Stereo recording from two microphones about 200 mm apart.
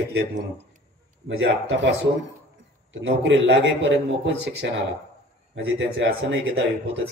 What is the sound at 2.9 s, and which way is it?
Speech, 65° right (ahead or behind).